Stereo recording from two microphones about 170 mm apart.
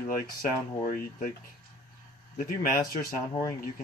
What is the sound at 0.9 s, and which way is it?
Speech, 50° left (ahead or behind).